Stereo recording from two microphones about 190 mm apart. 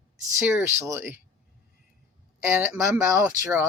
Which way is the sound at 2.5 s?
10° right (ahead or behind).